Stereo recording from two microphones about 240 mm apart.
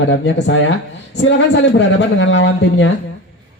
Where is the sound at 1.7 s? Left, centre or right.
Left.